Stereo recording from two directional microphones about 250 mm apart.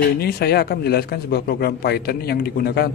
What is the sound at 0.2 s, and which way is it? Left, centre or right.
A man's voice, left.